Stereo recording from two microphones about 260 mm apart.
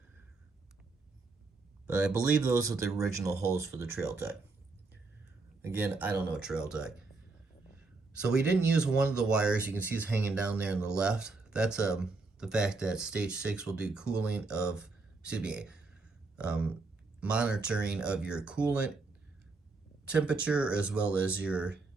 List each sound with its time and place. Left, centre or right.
1.9 s speech: centre
5.6 s speech: centre
8.3 s speech: centre
20.1 s speech: centre